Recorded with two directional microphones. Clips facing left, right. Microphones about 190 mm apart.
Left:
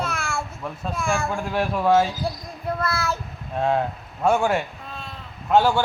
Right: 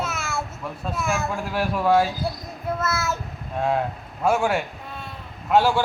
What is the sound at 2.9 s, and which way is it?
Child singing, 20° right (ahead or behind).